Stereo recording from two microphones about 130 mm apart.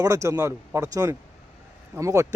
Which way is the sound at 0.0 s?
25° right (ahead or behind).